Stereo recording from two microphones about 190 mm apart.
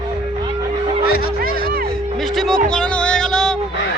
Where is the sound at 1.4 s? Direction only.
55° right (ahead or behind).